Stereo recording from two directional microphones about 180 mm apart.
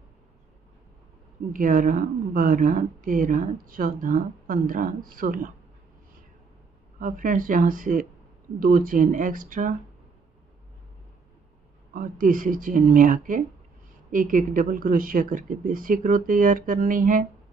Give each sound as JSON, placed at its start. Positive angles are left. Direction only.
{"t": 1.5, "sound": "a woman's voice", "side_deg": -50}
{"t": 7.0, "sound": "a woman's voice", "side_deg": -50}
{"t": 11.9, "sound": "a woman's voice", "side_deg": -50}